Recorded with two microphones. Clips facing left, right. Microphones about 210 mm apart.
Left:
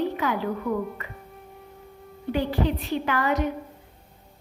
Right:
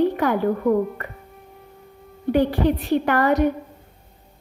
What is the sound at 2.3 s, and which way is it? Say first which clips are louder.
Speech: right 6 dB; 55° right (ahead or behind).